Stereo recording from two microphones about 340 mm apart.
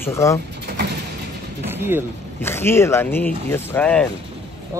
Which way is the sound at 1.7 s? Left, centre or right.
Centre.